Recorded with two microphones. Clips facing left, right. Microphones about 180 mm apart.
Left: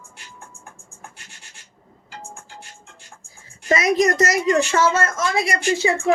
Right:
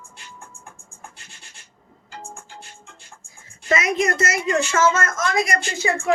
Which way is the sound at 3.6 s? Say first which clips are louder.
Left 3 dB; 35° left (ahead or behind).